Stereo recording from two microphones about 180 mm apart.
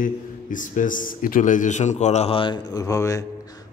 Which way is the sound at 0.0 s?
45° left (ahead or behind).